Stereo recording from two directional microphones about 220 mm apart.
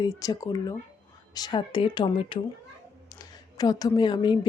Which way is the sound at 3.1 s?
15° left (ahead or behind).